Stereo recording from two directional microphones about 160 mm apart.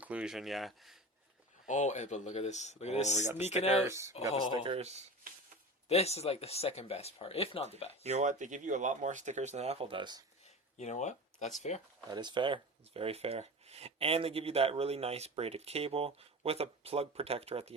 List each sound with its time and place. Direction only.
0.0 s speech: 5° right (ahead or behind)
1.6 s speech: 50° left (ahead or behind)
3.8 s speech: 20° right (ahead or behind)
4.5 s speech: 35° right (ahead or behind)
5.9 s speech: 40° left (ahead or behind)
8.0 s speech: 45° right (ahead or behind); by 10.2 s 30° right (ahead or behind)
10.8 s speech: 45° left (ahead or behind)
12.0 s speech: 25° right (ahead or behind)